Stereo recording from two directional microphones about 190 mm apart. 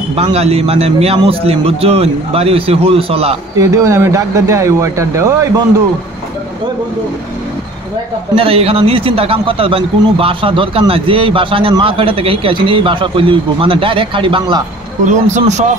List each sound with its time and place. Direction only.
0.1 s a man's voice: 30° right (ahead or behind)
3.5 s speech: 15° right (ahead or behind)
8.4 s a man's voice: 30° right (ahead or behind)
15.0 s a man's voice: 40° right (ahead or behind)